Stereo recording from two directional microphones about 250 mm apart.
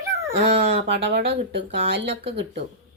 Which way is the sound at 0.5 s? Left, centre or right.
Right.